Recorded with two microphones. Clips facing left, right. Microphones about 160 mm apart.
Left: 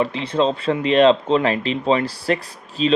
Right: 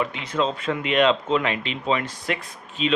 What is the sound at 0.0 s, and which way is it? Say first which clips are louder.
A man's voice: left 5 dB; 30° left (ahead or behind).